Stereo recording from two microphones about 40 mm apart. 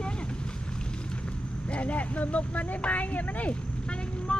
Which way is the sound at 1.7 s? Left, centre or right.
Left.